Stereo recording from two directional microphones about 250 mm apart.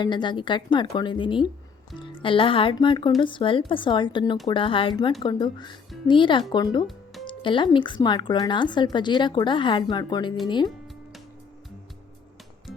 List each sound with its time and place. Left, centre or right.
0.0 s speech: centre
6.8 s music: centre
7.3 s speech: centre